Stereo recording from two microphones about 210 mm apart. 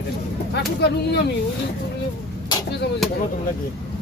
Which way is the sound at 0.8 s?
55° left (ahead or behind).